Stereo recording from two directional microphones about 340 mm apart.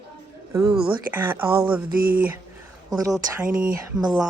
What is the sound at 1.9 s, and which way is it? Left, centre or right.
Speech, right.